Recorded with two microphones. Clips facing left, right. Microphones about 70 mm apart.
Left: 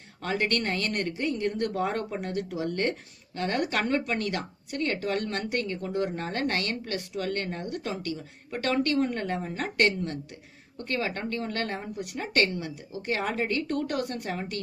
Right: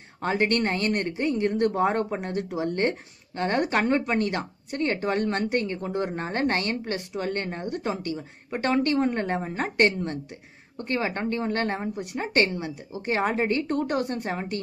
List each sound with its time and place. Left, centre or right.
0.2 s speech: right